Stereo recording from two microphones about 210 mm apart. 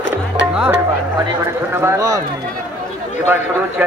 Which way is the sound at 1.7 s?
10° right (ahead or behind).